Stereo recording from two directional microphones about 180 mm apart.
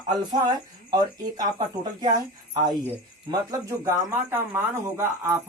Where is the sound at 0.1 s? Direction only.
25° right (ahead or behind).